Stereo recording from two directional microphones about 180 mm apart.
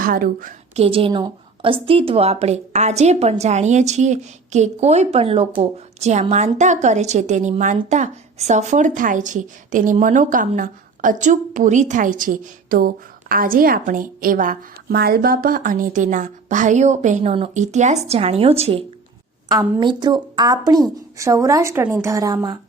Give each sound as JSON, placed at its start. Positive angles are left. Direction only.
{"t": 0.0, "sound": "a woman's voice", "side_deg": -50}
{"t": 0.8, "sound": "a woman's voice", "side_deg": -30}